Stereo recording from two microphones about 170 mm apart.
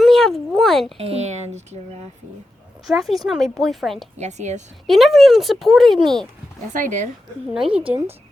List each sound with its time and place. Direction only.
0.0 s speech: centre (ahead or behind)
0.9 s speech: 35° right (ahead or behind)
2.8 s speech: centre (ahead or behind)
4.2 s a woman's voice: 45° right (ahead or behind)
4.9 s speech: centre (ahead or behind)
6.7 s a woman's voice: 50° right (ahead or behind)
7.5 s speech: 5° right (ahead or behind)